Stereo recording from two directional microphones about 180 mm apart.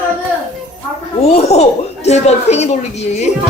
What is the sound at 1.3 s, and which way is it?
Speech, 35° left (ahead or behind).